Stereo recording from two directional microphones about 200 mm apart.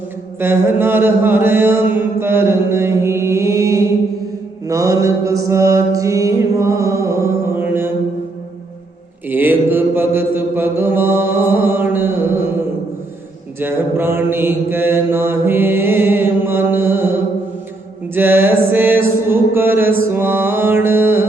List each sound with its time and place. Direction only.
0.3 s mantra: 10° right (ahead or behind)
9.3 s mantra: 10° right (ahead or behind)
13.6 s mantra: 10° right (ahead or behind)